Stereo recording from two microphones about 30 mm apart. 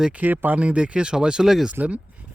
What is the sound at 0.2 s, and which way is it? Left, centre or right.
Speech, right.